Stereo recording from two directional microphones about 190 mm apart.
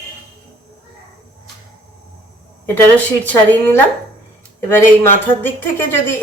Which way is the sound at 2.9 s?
10° left (ahead or behind).